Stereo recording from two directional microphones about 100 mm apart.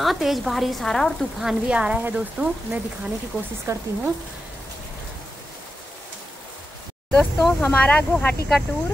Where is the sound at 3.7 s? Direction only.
30° right (ahead or behind).